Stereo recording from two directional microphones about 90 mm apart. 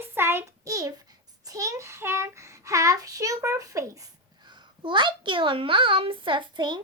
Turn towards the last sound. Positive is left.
turn(degrees=-60)  # may be behind; listen again after turning